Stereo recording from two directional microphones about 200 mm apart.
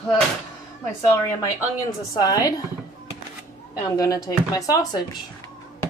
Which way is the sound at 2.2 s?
20° left (ahead or behind).